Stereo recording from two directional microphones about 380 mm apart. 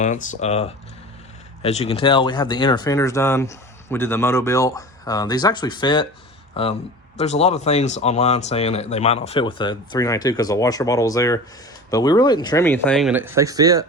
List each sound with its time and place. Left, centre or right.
0.0 s speech: centre